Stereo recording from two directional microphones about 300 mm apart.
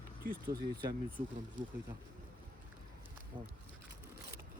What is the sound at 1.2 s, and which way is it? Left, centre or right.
Speech, right.